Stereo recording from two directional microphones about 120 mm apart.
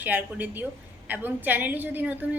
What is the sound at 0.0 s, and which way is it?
A woman's voice, 15° right (ahead or behind).